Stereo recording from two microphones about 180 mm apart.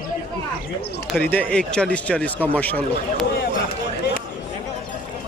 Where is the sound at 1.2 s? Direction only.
10° left (ahead or behind).